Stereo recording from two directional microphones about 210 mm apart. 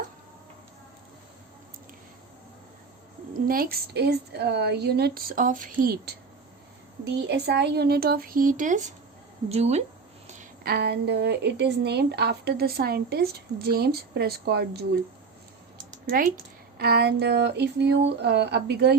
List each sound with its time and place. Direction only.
3.3 s a woman's voice: 45° right (ahead or behind)
16.0 s a woman's voice: 40° right (ahead or behind)